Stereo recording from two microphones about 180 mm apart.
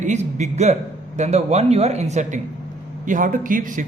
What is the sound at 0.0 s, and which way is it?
A man's voice, 40° right (ahead or behind).